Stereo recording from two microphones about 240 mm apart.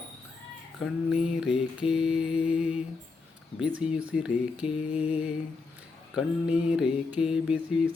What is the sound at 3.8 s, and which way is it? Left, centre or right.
Mantra, centre.